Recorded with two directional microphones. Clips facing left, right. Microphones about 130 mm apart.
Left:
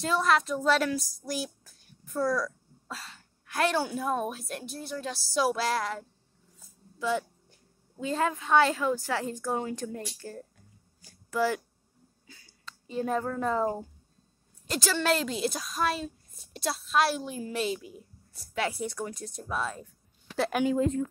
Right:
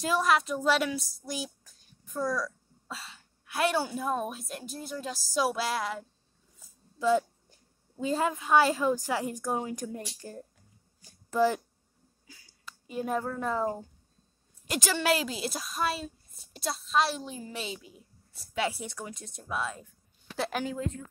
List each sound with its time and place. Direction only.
0.0 s a woman's voice: 10° right (ahead or behind)
8.0 s a woman's voice: 15° right (ahead or behind)
14.7 s a woman's voice: 15° right (ahead or behind)
20.7 s speech: 30° left (ahead or behind)